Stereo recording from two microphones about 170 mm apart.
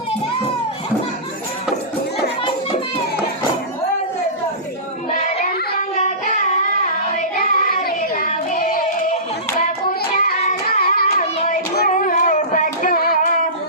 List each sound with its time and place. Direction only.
5.1 s child singing: 45° left (ahead or behind)
9.6 s hands: 55° left (ahead or behind)
10.5 s child singing: 60° left (ahead or behind)